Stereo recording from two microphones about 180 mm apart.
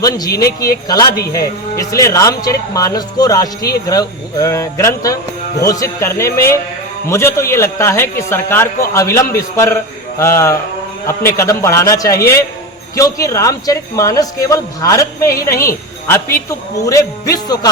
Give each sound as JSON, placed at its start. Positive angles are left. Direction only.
{"t": 0.3, "sound": "speech", "side_deg": 20}